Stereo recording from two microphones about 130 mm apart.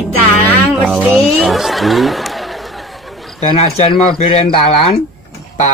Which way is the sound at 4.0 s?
50° left (ahead or behind).